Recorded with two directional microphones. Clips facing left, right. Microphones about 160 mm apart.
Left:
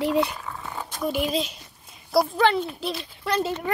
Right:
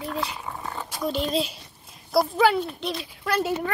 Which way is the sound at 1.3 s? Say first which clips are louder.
Right 1 dB; centre (ahead or behind).